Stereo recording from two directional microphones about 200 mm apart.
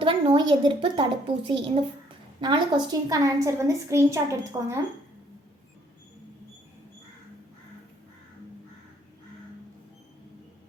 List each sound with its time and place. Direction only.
0.0 s a woman's voice: 25° right (ahead or behind)